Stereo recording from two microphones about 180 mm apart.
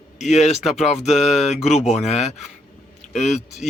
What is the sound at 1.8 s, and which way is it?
Speech, 40° left (ahead or behind).